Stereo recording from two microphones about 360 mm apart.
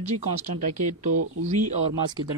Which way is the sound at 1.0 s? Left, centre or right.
Centre.